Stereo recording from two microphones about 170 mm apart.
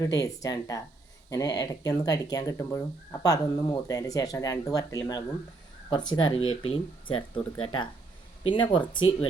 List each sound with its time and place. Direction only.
0.0 s speech: 20° left (ahead or behind)